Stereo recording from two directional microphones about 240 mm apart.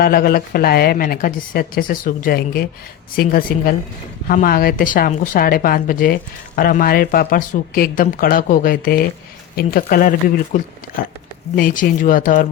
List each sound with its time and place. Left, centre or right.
0.0 s a woman's voice: left